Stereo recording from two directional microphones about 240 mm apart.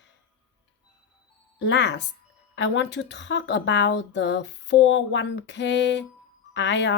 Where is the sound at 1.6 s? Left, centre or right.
Left.